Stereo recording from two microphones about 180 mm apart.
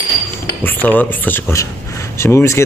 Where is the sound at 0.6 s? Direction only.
10° left (ahead or behind).